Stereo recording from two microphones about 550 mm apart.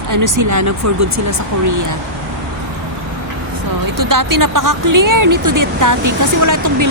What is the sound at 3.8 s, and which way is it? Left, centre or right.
Speech, right.